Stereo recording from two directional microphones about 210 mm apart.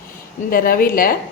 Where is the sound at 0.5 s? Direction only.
40° left (ahead or behind).